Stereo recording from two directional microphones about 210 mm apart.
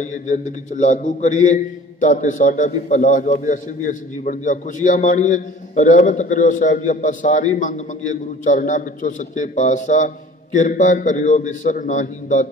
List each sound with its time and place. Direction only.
0.0 s a man's voice: 35° left (ahead or behind)